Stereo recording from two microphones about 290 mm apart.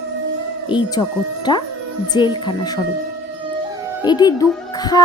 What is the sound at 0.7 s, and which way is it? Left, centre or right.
Speech, centre.